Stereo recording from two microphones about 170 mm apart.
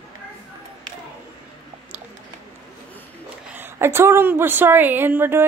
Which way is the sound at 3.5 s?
10° right (ahead or behind).